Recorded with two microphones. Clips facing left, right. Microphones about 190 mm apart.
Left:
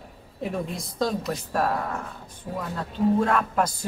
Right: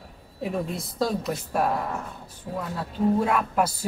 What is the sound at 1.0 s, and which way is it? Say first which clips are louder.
Speech: even; 5° right (ahead or behind).